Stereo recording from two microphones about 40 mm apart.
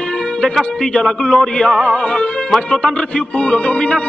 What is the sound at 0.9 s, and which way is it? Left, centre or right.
Music, centre.